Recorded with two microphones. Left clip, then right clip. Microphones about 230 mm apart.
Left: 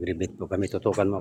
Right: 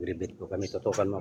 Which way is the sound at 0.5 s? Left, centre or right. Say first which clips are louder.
Left 4 dB; left.